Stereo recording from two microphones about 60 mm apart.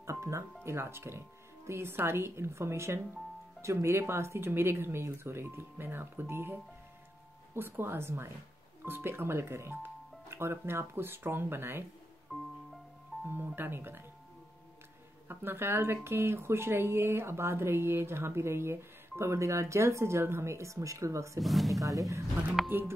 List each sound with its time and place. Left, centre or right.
0.0 s music: right
0.7 s speech: right
12.3 s music: centre
13.3 s speech: right
15.2 s speech: right
21.4 s speech: centre
22.7 s speech: right